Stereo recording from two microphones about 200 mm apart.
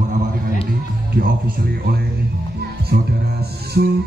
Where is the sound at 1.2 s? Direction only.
45° right (ahead or behind).